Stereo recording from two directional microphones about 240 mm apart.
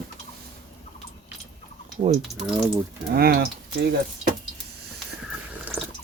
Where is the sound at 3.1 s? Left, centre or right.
Right.